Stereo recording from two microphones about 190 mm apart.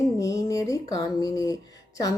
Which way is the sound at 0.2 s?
20° left (ahead or behind).